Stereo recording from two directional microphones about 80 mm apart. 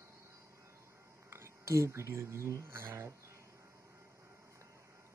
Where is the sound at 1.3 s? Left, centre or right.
Right.